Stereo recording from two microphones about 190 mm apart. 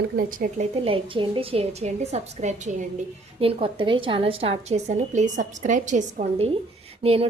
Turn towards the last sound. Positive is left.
turn(degrees=-30)  # may be behind; listen again after turning